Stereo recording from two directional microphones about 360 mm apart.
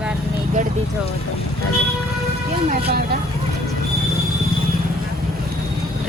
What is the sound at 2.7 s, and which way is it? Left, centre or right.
Speech, right.